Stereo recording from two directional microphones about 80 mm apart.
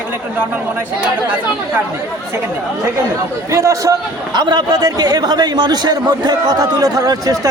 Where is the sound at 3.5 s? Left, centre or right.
Right.